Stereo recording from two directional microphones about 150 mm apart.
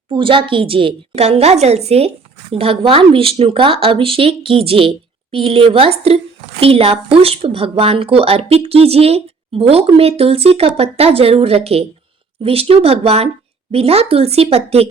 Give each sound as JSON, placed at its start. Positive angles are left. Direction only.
{"t": 0.1, "sound": "a woman's voice", "side_deg": -35}